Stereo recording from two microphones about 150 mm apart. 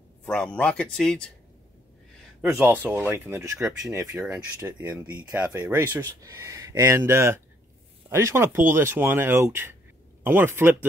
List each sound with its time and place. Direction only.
0.2 s speech: 5° left (ahead or behind)
2.4 s speech: 15° right (ahead or behind)